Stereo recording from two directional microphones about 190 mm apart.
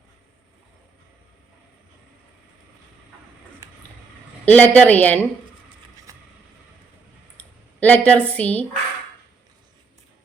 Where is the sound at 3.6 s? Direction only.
15° right (ahead or behind).